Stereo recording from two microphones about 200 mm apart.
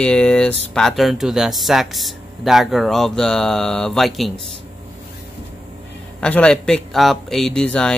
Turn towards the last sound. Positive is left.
turn(degrees=5)  # may be behind; listen again after turning